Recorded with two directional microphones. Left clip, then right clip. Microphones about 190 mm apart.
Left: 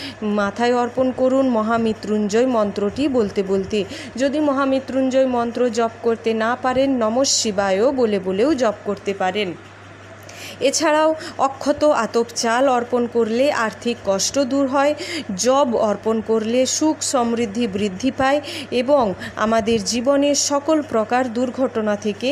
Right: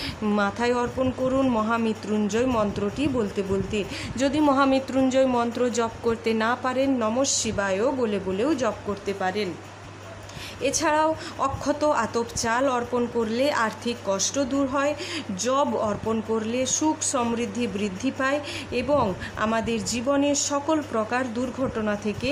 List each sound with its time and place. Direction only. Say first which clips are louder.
0.3 s a woman's voice: left 6 dB; 15° left (ahead or behind)
4.2 s a woman's voice: left 2 dB; 5° left (ahead or behind)
10.6 s a woman's voice: left 6 dB; 20° left (ahead or behind)